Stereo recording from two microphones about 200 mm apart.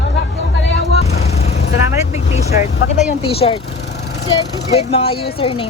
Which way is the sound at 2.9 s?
30° left (ahead or behind).